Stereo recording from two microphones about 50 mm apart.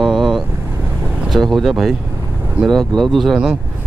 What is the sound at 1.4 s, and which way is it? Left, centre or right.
Speech, centre.